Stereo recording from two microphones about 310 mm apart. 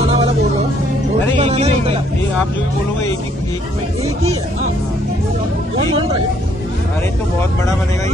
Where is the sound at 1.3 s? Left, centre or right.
Centre.